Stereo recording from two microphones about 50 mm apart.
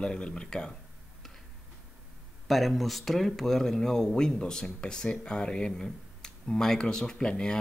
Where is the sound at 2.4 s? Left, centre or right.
Centre.